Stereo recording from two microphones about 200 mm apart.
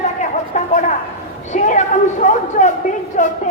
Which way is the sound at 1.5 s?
35° left (ahead or behind).